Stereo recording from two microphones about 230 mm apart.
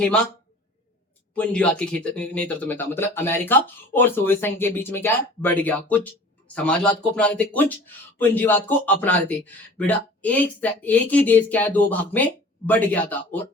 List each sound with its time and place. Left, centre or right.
0.0 s speech: centre
1.4 s speech: centre